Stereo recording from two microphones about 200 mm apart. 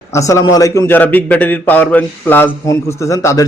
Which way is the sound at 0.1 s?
15° left (ahead or behind).